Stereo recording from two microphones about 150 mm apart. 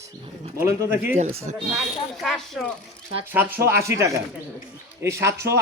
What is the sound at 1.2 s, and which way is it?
Speech, 50° right (ahead or behind).